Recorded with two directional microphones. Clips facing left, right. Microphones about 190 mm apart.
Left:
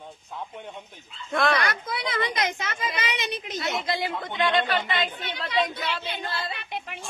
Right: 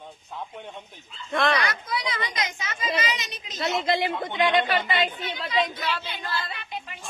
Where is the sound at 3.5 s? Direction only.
25° right (ahead or behind).